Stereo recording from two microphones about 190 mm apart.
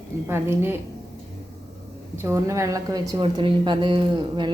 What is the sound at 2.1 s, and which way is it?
A woman's voice, 15° right (ahead or behind).